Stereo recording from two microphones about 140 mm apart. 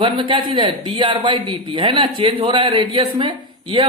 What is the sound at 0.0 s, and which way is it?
A man's voice, 35° right (ahead or behind).